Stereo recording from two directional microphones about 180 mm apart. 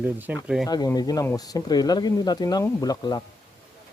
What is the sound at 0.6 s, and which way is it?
Speech, 20° left (ahead or behind).